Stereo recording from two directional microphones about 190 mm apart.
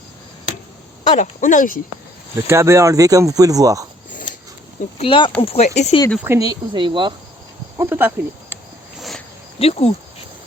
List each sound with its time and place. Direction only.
1.0 s speech: 40° left (ahead or behind)
2.5 s speech: 15° right (ahead or behind)
4.9 s speech: 30° left (ahead or behind)
6.2 s speech: 15° right (ahead or behind)
7.8 s speech: 10° right (ahead or behind)
9.0 s a sound: centre (ahead or behind)
9.6 s speech: 30° left (ahead or behind)